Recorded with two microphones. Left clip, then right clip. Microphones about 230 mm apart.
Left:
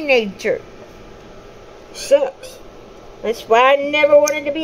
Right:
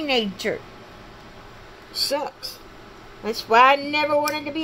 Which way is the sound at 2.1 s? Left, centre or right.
Centre.